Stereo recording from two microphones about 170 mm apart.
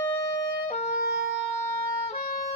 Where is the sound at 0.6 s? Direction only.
40° left (ahead or behind).